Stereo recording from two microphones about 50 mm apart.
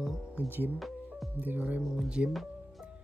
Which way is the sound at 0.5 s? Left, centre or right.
Right.